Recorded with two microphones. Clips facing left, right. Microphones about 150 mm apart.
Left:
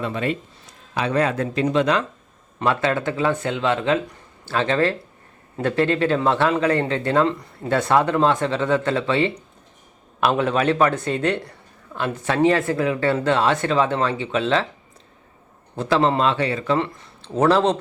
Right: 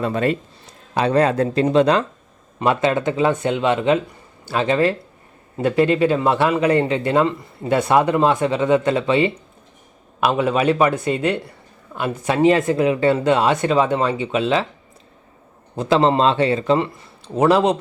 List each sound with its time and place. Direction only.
0.0 s speech: 40° right (ahead or behind)
2.6 s a man's voice: 20° right (ahead or behind)
10.2 s a man's voice: 5° right (ahead or behind)
15.7 s a man's voice: 15° right (ahead or behind)
16.0 s speech: 30° right (ahead or behind)
16.7 s a man's voice: 10° right (ahead or behind)